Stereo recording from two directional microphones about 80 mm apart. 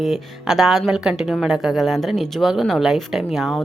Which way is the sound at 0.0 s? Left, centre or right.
Centre.